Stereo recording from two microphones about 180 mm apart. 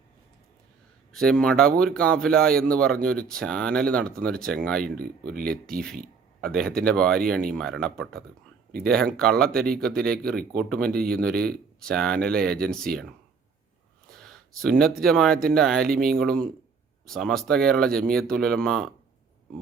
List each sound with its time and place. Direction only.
1.1 s speech: 5° left (ahead or behind)
9.6 s speech: 55° right (ahead or behind)
9.8 s speech: 5° left (ahead or behind)
14.1 s speech: centre (ahead or behind)